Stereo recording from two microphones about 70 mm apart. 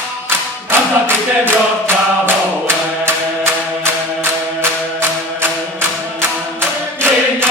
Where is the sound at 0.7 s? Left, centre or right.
Right.